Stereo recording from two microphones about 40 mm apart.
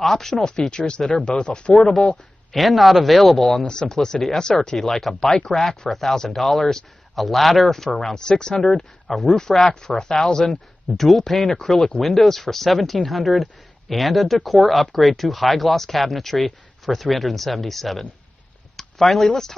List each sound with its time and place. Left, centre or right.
0.0 s speech: centre; by 1.9 s left
2.5 s speech: centre
3.6 s speech: centre